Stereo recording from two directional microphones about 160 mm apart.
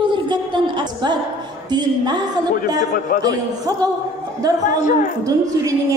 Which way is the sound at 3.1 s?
60° left (ahead or behind).